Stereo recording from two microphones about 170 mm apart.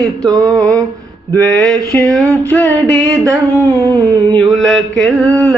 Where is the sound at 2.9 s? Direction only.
20° right (ahead or behind).